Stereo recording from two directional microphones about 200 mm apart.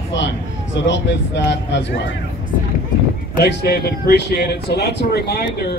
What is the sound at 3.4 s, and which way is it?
Speech, 50° left (ahead or behind).